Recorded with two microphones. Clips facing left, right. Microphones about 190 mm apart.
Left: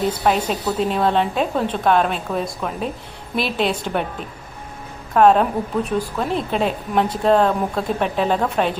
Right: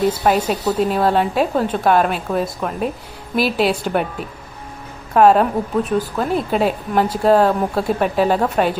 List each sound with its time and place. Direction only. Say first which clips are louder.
0.0 s a woman's voice: right 3 dB; 5° right (ahead or behind)